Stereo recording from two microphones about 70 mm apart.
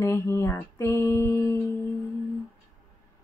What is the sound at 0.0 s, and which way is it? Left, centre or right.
Music, left.